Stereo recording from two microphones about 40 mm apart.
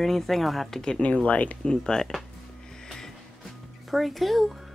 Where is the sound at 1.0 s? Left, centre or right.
Left.